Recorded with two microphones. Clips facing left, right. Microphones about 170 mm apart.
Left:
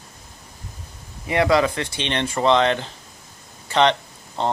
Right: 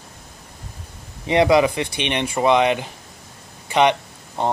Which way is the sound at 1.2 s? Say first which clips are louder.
Right 3 dB; 20° right (ahead or behind).